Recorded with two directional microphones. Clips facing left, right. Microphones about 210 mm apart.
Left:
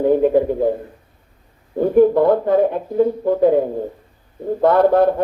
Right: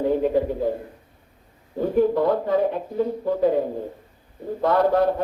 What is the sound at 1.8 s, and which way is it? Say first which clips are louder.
Speech: left 7 dB; 55° left (ahead or behind).